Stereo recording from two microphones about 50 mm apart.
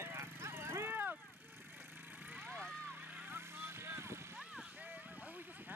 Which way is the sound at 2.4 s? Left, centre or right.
Right.